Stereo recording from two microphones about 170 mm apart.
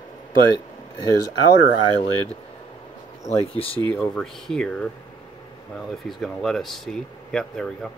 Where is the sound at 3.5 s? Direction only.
35° left (ahead or behind).